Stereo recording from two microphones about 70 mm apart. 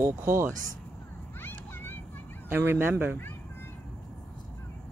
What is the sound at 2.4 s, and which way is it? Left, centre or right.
Speech, right.